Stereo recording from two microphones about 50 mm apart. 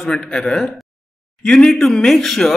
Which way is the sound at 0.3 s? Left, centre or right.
Centre.